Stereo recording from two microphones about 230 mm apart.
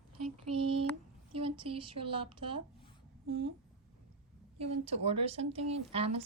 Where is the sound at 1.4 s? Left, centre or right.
Right.